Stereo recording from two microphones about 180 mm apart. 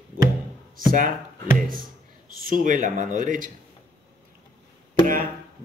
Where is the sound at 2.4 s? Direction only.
50° right (ahead or behind).